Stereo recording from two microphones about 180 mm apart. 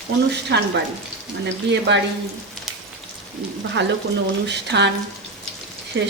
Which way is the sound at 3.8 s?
80° right.